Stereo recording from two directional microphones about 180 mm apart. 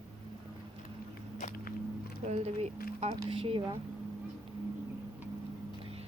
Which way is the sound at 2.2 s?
35° right (ahead or behind).